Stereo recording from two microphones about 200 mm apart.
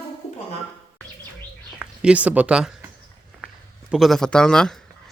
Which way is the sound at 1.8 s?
5° right (ahead or behind).